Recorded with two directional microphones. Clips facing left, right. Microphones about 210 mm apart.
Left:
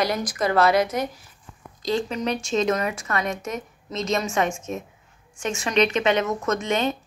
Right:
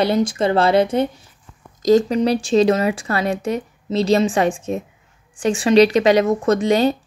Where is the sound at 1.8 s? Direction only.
40° right (ahead or behind).